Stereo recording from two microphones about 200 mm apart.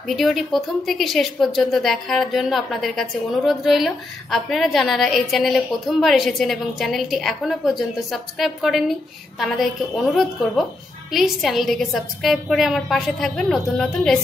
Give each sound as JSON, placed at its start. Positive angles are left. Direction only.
{"t": 0.1, "sound": "a woman's voice", "side_deg": 0}